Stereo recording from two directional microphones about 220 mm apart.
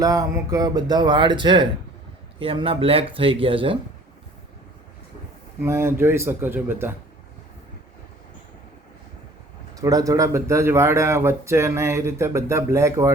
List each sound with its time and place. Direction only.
0.0 s speech: 15° right (ahead or behind)
5.6 s speech: 10° right (ahead or behind)
9.7 s speech: 15° right (ahead or behind)